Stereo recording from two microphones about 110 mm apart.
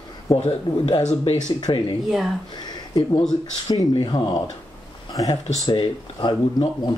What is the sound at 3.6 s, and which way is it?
Speech, 45° left (ahead or behind).